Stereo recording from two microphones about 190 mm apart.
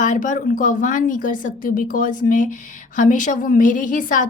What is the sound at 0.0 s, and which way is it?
Speech, 40° left (ahead or behind).